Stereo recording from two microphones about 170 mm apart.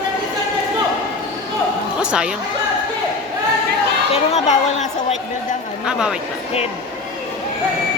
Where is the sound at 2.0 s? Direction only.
5° right (ahead or behind).